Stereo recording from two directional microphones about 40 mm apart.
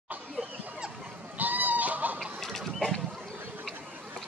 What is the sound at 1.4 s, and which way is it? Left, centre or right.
Goose, right.